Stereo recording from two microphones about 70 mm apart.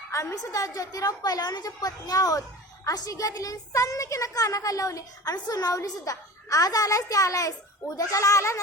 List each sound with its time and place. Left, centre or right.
0.1 s a woman's voice: left